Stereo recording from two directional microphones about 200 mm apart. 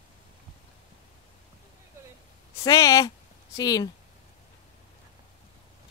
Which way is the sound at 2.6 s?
15° left (ahead or behind).